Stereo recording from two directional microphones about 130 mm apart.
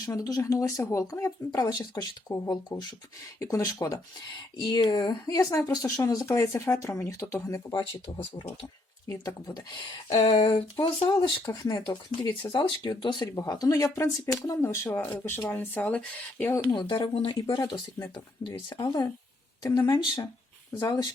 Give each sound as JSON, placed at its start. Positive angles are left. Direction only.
{"t": 0.0, "sound": "speech", "side_deg": 25}
{"t": 9.0, "sound": "speech", "side_deg": 30}
{"t": 10.1, "sound": "a sound", "side_deg": 50}
{"t": 10.4, "sound": "speech", "side_deg": 35}
{"t": 16.7, "sound": "speech", "side_deg": 35}
{"t": 18.7, "sound": "speech", "side_deg": 30}